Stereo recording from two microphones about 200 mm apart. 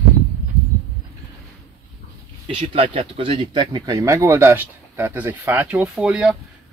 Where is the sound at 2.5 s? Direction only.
25° right (ahead or behind).